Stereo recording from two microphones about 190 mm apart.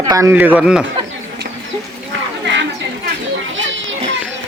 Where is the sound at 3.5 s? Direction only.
80° right.